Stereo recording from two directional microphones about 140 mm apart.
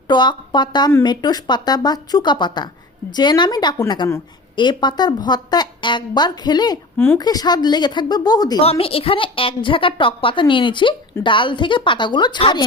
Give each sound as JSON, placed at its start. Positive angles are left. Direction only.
{"t": 0.1, "sound": "a woman's voice", "side_deg": 35}
{"t": 8.6, "sound": "a woman's voice", "side_deg": 45}